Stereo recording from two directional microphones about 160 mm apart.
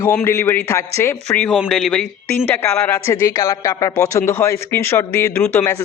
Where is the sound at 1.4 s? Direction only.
5° left (ahead or behind).